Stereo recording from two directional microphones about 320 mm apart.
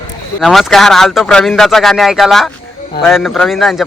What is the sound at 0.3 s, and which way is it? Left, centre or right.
A man's voice, centre.